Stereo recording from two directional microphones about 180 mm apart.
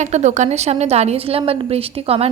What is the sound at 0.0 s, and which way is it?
A woman's voice, 40° right (ahead or behind).